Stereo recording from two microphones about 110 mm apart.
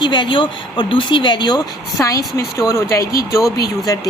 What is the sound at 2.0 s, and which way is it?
A woman's voice, 30° left (ahead or behind).